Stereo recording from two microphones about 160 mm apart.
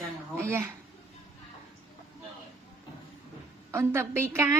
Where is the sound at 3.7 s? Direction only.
15° right (ahead or behind).